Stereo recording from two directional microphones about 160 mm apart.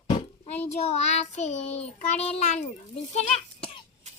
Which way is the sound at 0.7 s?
40° left (ahead or behind).